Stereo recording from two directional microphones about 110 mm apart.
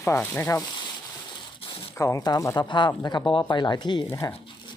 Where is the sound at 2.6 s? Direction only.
45° left (ahead or behind).